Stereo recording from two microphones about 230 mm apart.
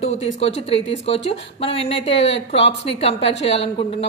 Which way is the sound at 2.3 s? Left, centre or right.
Left.